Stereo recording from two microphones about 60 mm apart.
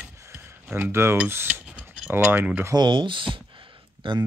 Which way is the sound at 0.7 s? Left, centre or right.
Right.